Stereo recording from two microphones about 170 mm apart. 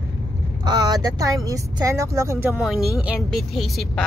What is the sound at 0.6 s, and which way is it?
Speech, 25° right (ahead or behind).